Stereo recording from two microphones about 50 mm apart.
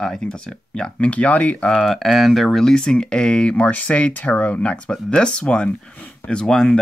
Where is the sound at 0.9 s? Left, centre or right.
Left.